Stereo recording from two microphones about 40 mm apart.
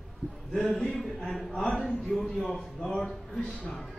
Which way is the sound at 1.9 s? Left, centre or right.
Centre.